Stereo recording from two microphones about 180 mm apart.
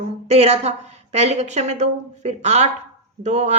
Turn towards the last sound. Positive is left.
turn(degrees=-40)  # may be behind; listen again after turning